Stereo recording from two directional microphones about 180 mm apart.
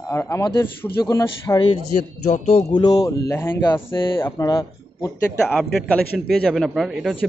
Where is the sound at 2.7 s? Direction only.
20° left (ahead or behind).